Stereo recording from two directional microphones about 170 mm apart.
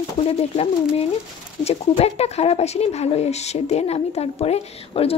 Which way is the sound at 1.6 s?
40° left (ahead or behind).